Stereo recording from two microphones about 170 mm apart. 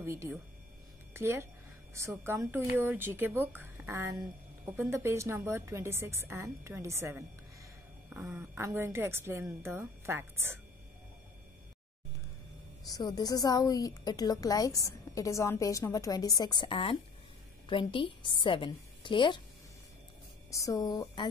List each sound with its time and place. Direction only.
0.0 s speech: 15° right (ahead or behind)
12.8 s a woman's voice: 20° left (ahead or behind)
20.5 s a woman's voice: 20° left (ahead or behind)